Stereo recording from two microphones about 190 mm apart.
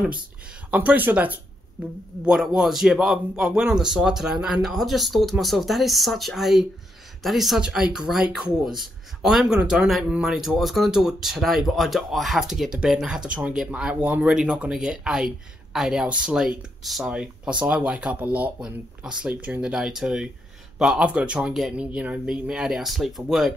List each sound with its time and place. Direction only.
0.7 s speech: 10° right (ahead or behind)